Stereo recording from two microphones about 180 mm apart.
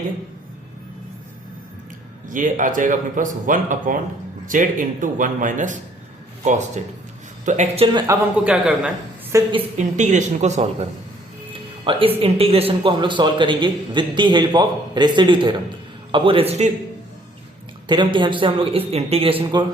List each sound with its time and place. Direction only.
2.3 s a man's voice: 45° right (ahead or behind)
7.9 s speech: 15° right (ahead or behind)
9.3 s speech: 25° right (ahead or behind)
9.7 s speech: 40° right (ahead or behind)
17.8 s speech: 25° right (ahead or behind)